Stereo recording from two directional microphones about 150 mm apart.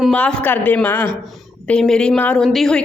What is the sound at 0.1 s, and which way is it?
A woman's voice, 10° left (ahead or behind).